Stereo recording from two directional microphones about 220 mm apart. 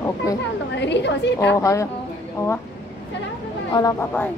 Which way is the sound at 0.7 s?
50° left (ahead or behind).